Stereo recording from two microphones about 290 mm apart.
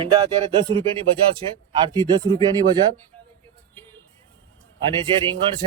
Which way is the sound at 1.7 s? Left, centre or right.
Centre.